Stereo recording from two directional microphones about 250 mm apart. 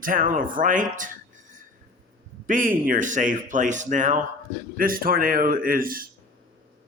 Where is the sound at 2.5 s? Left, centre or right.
Right.